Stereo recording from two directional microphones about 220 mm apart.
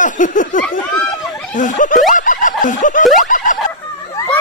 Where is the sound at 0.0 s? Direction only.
35° left (ahead or behind).